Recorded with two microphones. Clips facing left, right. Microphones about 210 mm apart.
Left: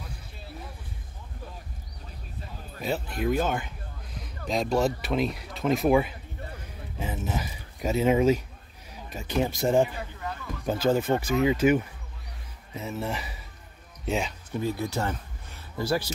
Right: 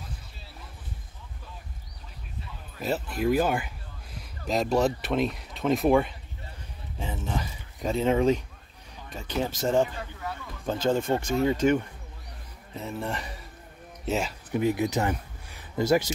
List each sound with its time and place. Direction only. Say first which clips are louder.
2.8 s speech: right 1 dB; 5° right (ahead or behind)
14.5 s speech: right 5 dB; 15° right (ahead or behind)